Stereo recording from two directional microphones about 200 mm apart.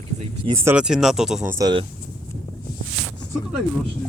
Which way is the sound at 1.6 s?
25° right (ahead or behind).